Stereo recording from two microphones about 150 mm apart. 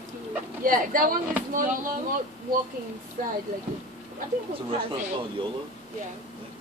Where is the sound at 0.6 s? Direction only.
65° right (ahead or behind).